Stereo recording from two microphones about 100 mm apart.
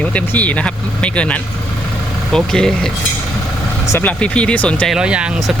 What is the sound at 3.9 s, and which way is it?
Speech, 20° left (ahead or behind).